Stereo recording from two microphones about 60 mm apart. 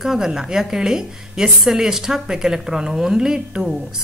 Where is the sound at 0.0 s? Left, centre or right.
Centre.